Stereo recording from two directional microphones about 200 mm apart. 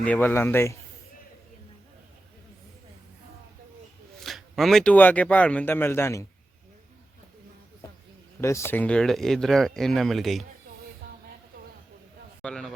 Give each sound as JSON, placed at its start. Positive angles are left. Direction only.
{"t": 0.0, "sound": "a man's voice", "side_deg": 10}
{"t": 4.2, "sound": "speech", "side_deg": 0}
{"t": 8.4, "sound": "speech", "side_deg": 15}
{"t": 12.4, "sound": "a man's voice", "side_deg": 5}